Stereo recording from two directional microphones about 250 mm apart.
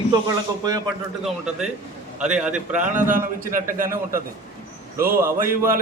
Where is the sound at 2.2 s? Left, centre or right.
Centre.